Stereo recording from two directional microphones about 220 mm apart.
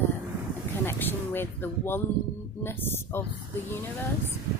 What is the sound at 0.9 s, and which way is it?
Speech, 10° left (ahead or behind).